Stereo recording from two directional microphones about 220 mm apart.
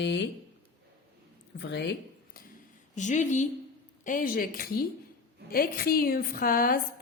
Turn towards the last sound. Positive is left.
turn(degrees=40)  # may be behind; listen again after turning